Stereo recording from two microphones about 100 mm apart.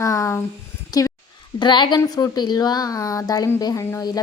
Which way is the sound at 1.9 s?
35° left (ahead or behind).